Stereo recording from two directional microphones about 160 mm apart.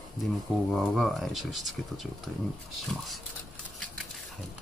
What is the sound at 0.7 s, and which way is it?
Speech, centre (ahead or behind).